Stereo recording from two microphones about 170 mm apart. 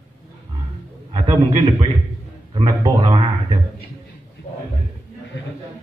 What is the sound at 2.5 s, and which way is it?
Speech, 25° right (ahead or behind).